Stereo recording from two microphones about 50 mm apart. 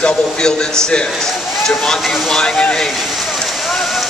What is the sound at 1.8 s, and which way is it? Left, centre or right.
A man's voice, centre.